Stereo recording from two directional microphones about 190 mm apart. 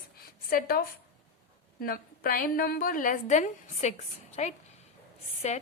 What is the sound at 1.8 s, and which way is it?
A woman's voice, 50° left (ahead or behind).